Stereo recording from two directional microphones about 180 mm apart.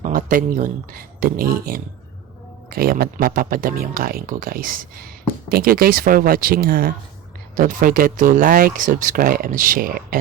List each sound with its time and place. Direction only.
0.0 s speech: 50° right (ahead or behind)